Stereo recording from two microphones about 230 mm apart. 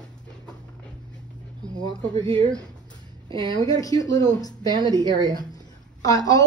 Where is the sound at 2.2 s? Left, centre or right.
Right.